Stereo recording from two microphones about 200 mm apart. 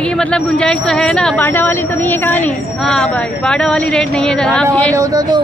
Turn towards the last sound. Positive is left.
turn(degrees=-20)  # may be behind; listen again after turning